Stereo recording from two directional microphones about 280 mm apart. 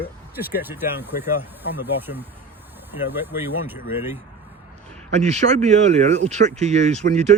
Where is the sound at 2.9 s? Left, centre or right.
Centre.